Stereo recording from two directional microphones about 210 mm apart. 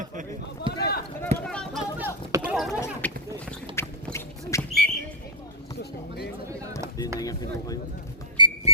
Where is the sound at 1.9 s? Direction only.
10° right (ahead or behind); by 3.2 s 10° left (ahead or behind).